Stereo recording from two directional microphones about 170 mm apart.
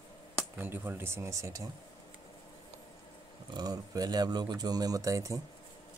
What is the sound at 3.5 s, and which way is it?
Speech, 20° right (ahead or behind).